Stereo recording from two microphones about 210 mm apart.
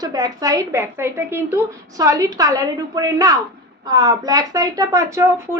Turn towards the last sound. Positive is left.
turn(degrees=-15)  # may be behind; listen again after turning